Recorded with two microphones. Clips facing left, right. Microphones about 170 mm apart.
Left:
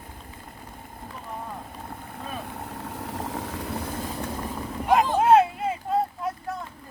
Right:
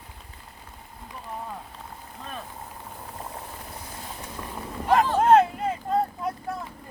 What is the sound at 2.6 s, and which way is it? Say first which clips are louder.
Vehicle: left 6 dB; 80° left.